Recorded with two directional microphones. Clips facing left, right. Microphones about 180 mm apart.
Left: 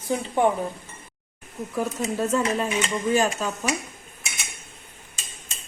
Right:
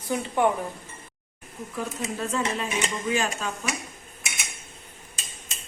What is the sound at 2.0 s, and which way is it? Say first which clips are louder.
Speech: left 4 dB; 40° left (ahead or behind).